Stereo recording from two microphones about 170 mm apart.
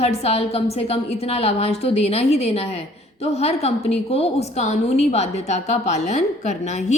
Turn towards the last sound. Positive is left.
turn(degrees=40)  # may be behind; listen again after turning